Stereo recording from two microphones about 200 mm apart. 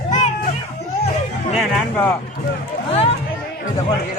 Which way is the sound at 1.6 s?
5° left (ahead or behind).